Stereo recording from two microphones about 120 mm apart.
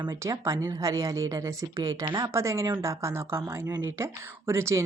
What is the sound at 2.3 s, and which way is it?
A woman's voice, 25° right (ahead or behind).